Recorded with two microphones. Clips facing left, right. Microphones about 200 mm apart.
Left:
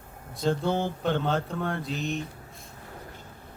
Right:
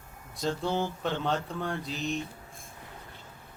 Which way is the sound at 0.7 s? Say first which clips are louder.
Left 3 dB; 55° left (ahead or behind).